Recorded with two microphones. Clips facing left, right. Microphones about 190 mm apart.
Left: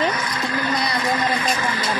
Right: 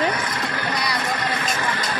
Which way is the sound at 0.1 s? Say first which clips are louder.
Left 1 dB; 60° right (ahead or behind).